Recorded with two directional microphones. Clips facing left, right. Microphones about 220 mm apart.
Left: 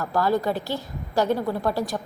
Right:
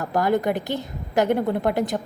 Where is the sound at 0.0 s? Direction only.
20° right (ahead or behind).